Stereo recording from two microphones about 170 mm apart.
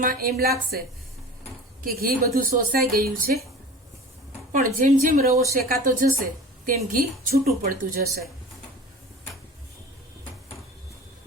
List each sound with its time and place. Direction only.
0.0 s a woman's voice: 60° right (ahead or behind)
1.8 s a woman's voice: 55° right (ahead or behind)
4.5 s a woman's voice: 50° right (ahead or behind)